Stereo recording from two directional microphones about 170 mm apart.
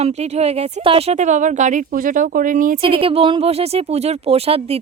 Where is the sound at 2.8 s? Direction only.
30° right (ahead or behind).